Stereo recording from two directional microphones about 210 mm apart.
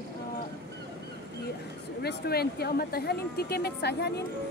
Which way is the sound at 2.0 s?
50° left (ahead or behind).